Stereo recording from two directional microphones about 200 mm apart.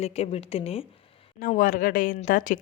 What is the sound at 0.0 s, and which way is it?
Speech, 30° left (ahead or behind).